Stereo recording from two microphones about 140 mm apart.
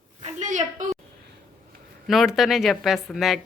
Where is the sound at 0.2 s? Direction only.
60° right (ahead or behind).